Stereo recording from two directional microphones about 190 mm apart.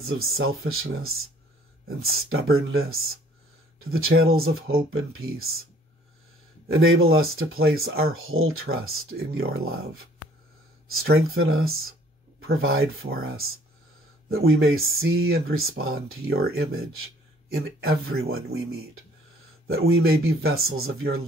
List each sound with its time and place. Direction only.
0.0 s speech: 90° right
6.7 s speech: 90° right